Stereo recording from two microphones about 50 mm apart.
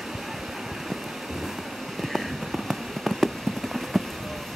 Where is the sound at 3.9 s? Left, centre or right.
Centre.